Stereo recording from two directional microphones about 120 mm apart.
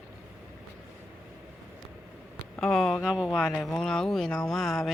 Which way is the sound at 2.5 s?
Centre (ahead or behind).